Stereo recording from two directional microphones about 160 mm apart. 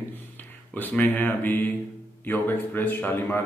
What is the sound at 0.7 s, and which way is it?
Speech, 10° left (ahead or behind).